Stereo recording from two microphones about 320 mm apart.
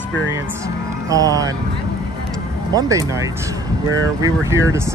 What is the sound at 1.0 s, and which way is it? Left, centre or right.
Speech, centre.